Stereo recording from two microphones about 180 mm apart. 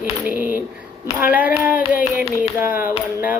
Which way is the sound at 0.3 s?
10° right (ahead or behind).